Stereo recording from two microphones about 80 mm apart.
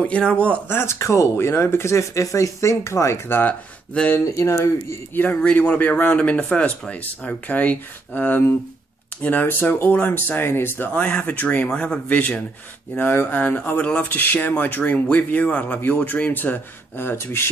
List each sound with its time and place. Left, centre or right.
0.0 s speech: centre
0.7 s speech: left
3.3 s speech: left
4.4 s speech: left
5.1 s speech: left
12.9 s speech: left